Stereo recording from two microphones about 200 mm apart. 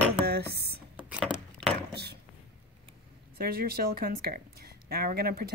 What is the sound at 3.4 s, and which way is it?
Speech, 50° right (ahead or behind).